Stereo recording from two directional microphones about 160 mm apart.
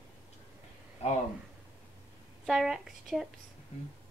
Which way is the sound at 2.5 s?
Centre (ahead or behind).